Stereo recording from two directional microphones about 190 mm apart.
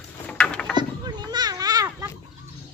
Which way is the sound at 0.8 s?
20° right (ahead or behind).